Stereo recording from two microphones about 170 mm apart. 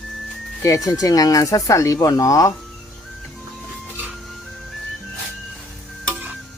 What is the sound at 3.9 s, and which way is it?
Music, 5° right (ahead or behind).